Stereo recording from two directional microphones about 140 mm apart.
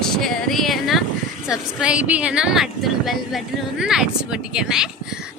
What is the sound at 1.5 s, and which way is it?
Speech, 5° right (ahead or behind).